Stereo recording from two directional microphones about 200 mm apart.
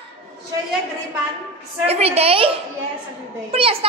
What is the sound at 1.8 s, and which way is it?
Speech, 30° right (ahead or behind).